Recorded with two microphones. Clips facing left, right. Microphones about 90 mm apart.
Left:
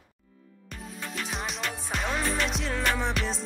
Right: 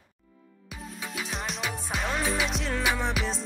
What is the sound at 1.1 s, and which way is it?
Music, centre (ahead or behind).